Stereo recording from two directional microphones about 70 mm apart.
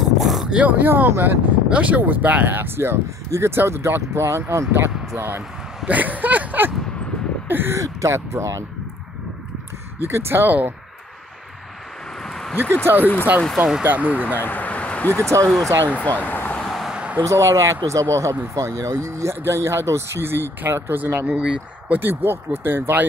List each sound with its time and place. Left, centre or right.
0.0 s a sound: centre
0.6 s speech: right
5.9 s speech: right
7.8 s speech: right
10.0 s speech: right
13.0 s speech: left
13.6 s speech: centre
13.8 s speech: right
14.4 s a sound: left
15.9 s speech: left
16.5 s vehicle: centre
16.8 s a sound: centre
17.2 s speech: right
21.4 s speech: centre; by 23.0 s right